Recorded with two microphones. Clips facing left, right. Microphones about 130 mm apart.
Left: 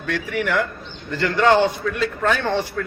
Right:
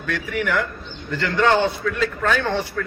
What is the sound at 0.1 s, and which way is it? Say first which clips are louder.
A man's voice: left 1 dB; 20° left (ahead or behind).